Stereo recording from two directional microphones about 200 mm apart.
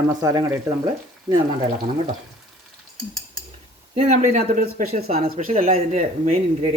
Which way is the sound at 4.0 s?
35° right (ahead or behind).